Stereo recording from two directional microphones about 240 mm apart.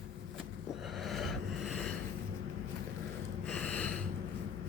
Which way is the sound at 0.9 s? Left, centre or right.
Centre.